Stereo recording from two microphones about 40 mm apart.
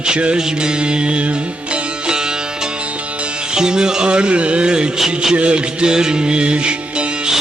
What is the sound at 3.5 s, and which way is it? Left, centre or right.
Music, centre.